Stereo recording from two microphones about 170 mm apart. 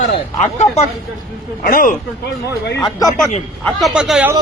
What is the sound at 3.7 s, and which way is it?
Speech, 5° right (ahead or behind).